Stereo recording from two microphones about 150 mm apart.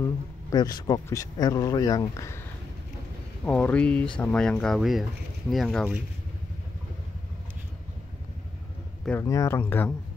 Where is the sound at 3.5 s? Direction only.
10° left (ahead or behind).